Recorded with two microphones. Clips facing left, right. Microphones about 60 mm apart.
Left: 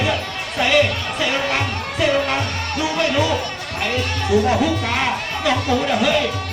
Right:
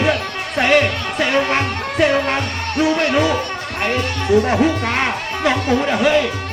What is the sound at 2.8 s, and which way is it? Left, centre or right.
Speech, right.